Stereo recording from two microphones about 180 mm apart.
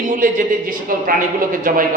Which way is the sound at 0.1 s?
50° right (ahead or behind).